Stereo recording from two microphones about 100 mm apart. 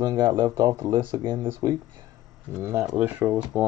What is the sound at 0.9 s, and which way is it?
Speech, 55° right (ahead or behind).